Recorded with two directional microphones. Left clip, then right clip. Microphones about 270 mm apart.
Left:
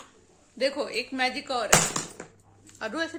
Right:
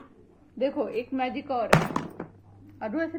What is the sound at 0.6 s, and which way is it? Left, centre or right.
Speech, centre.